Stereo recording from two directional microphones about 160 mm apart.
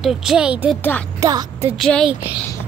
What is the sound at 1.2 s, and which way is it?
Speech, 20° right (ahead or behind).